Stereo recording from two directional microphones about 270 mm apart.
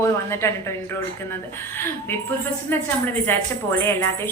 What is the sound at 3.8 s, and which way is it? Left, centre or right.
Speech, centre.